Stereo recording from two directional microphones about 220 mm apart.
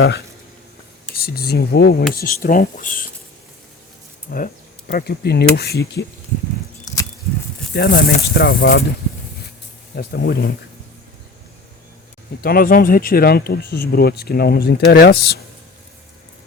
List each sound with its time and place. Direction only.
1.1 s speech: 45° left (ahead or behind)
4.3 s speech: 45° left (ahead or behind)
6.8 s a sound: 15° left (ahead or behind)
7.7 s speech: 45° left (ahead or behind)
9.9 s speech: 45° left (ahead or behind)
12.4 s speech: 45° left (ahead or behind)